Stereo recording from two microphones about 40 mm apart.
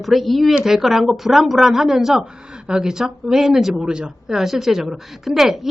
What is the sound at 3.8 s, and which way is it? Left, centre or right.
Speech, right.